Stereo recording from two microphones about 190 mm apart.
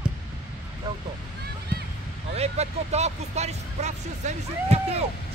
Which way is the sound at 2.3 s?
35° right (ahead or behind).